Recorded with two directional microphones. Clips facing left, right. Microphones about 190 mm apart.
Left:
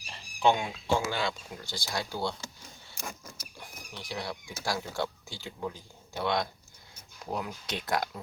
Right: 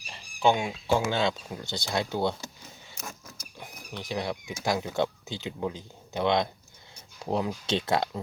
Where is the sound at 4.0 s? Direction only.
20° right (ahead or behind).